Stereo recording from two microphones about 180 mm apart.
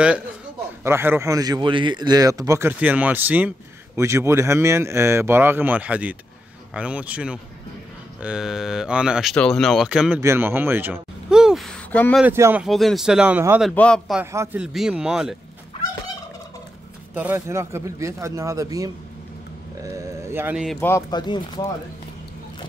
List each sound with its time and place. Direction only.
0.8 s speech: 15° right (ahead or behind)
10.2 s a sound: 10° right (ahead or behind); by 12.2 s 5° left (ahead or behind)
12.2 s speech: 15° right (ahead or behind)
12.6 s speech: centre (ahead or behind)
13.6 s speech: 5° left (ahead or behind)
14.2 s speech: 15° right (ahead or behind)
17.1 s speech: 10° right (ahead or behind)
19.8 s a sound: 20° right (ahead or behind)
20.8 s speech: 20° left (ahead or behind)